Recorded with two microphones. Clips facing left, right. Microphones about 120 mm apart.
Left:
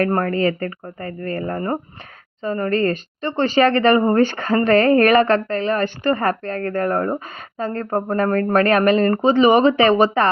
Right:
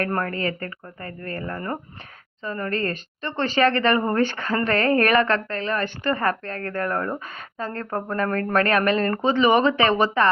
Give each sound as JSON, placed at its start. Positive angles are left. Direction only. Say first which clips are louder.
{"t": 0.0, "sound": "a woman's voice", "louder": "left 7 dB", "side_deg": 35}